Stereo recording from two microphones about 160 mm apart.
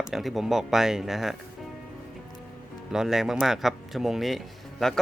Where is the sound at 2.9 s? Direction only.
5° right (ahead or behind).